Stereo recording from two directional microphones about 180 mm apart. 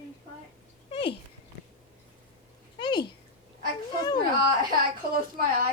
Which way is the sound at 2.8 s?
25° left (ahead or behind).